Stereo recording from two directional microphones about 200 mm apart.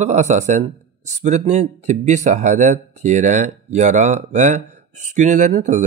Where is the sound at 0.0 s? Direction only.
35° right (ahead or behind).